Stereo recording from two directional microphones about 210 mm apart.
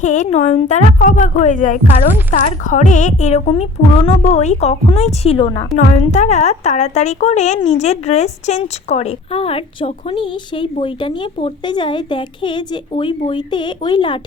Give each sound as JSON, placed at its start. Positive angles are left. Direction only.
{"t": 0.0, "sound": "a woman's voice", "side_deg": 35}